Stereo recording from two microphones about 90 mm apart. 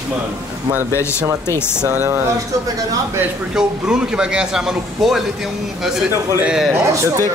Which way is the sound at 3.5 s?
5° right (ahead or behind).